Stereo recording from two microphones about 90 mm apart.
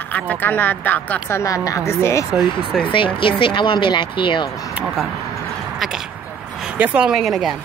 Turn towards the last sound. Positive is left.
turn(degrees=0)  # may be behind; listen again after turning